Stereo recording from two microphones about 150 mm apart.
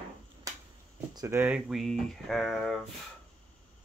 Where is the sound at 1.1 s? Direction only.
20° right (ahead or behind).